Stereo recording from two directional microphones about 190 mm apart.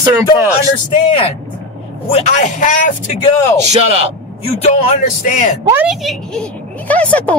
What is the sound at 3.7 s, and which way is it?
Speech, 30° right (ahead or behind).